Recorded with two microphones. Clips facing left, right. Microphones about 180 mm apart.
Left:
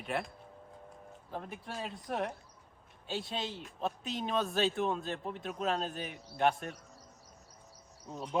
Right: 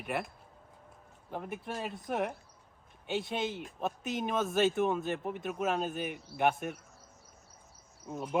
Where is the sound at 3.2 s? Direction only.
20° right (ahead or behind).